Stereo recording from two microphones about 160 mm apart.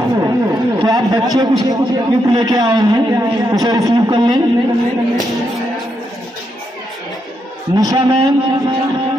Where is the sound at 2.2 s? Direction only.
25° right (ahead or behind).